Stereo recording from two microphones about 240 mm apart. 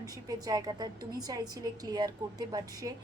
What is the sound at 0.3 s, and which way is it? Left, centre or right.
A woman's voice, centre.